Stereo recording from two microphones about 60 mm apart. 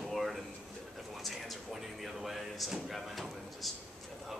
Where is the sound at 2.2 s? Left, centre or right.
Centre.